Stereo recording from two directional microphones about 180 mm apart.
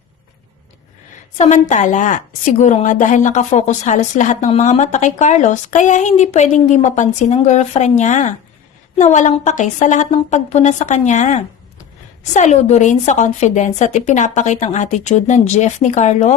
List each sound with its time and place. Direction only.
1.4 s a woman's voice: 40° left (ahead or behind)